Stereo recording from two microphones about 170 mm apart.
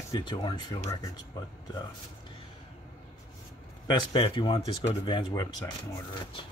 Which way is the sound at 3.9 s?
30° left (ahead or behind).